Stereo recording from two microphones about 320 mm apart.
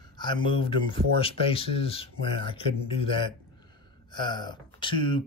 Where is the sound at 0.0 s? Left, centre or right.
Centre.